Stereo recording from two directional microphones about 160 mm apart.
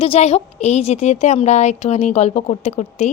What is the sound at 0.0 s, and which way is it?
A woman's voice, 40° left (ahead or behind).